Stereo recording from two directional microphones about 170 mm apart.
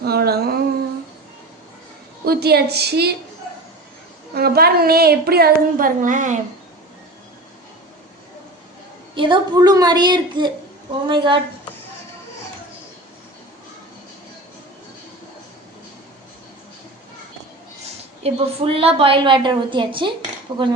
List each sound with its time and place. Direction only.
0.0 s speech: 65° right (ahead or behind)
2.2 s a woman's voice: 70° right (ahead or behind)
4.4 s speech: 65° right (ahead or behind); by 6.4 s 45° right (ahead or behind)
9.1 s a woman's voice: 30° right (ahead or behind)
18.2 s a woman's voice: 35° right (ahead or behind)